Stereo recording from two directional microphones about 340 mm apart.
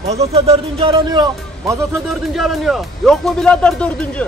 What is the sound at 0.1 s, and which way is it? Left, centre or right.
Speech, centre.